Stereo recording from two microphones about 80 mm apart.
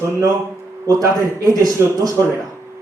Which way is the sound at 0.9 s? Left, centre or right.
Right.